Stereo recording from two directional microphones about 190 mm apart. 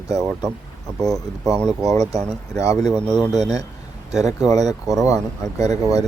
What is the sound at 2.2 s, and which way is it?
Speech, 5° left (ahead or behind).